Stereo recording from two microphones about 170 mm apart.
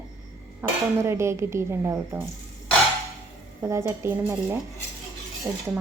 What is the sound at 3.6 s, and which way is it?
A woman's voice, 15° right (ahead or behind).